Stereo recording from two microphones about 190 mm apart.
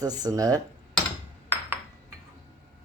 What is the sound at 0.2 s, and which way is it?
Speech, 20° right (ahead or behind).